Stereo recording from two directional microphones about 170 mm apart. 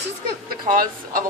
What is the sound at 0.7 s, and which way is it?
Speech, 55° right (ahead or behind).